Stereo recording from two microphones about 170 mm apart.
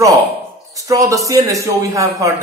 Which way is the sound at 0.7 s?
20° right (ahead or behind).